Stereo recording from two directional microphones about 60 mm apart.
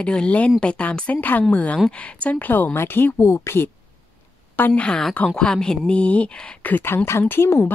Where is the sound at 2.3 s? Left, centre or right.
Left.